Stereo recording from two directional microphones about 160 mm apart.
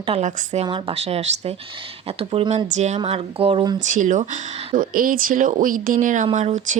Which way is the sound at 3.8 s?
50° right (ahead or behind).